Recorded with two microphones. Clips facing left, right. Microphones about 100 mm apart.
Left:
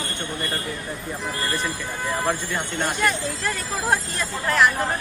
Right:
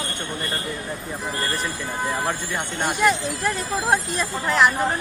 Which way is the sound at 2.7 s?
15° right (ahead or behind).